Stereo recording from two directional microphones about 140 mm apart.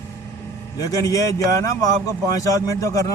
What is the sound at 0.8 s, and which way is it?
A man's voice, 25° left (ahead or behind).